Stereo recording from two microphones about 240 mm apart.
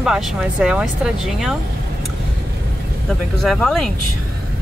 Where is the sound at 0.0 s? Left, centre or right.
Centre.